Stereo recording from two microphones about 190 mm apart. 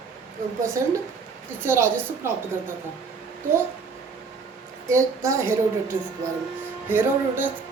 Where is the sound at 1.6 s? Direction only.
10° right (ahead or behind).